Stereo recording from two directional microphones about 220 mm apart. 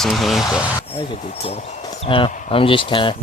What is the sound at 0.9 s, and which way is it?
Speech, 25° left (ahead or behind).